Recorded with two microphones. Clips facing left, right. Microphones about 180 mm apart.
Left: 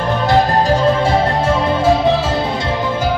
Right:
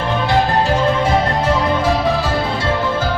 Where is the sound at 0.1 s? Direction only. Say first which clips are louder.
Left 3 dB; 40° left (ahead or behind).